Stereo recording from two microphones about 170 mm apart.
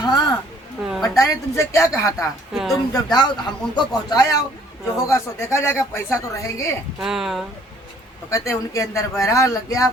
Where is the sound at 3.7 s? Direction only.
20° left (ahead or behind).